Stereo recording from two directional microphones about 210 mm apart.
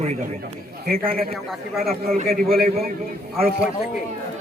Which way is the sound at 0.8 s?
45° right (ahead or behind).